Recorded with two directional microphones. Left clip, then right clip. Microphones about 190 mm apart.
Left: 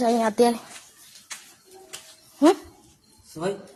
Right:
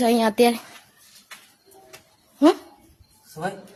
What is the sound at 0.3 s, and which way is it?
Speech, 15° right (ahead or behind).